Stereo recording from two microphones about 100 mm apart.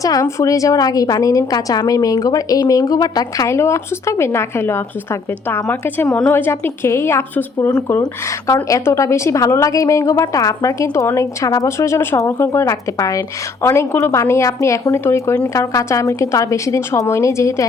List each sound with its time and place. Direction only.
0.0 s a woman's voice: 35° left (ahead or behind)
6.1 s a woman's voice: 10° left (ahead or behind)
6.3 s a woman's voice: 25° left (ahead or behind)